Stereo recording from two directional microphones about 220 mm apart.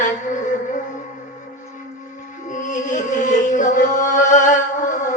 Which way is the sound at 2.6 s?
35° left (ahead or behind).